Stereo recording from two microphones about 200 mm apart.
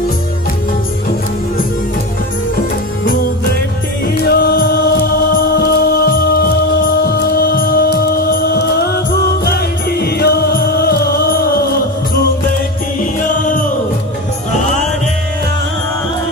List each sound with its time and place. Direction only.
4.2 s music: 50° left (ahead or behind)